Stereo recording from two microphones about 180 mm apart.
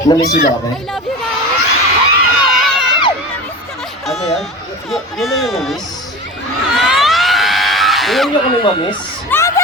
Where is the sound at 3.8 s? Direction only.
Centre (ahead or behind).